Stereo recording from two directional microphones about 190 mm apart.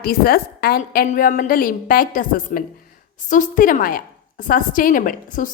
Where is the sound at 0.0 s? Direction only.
55° left (ahead or behind).